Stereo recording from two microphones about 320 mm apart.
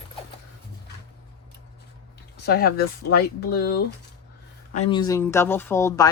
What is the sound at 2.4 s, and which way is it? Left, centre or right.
Speech, left.